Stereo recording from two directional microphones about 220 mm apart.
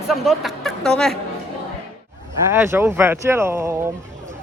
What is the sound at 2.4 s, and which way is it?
Speech, 10° right (ahead or behind).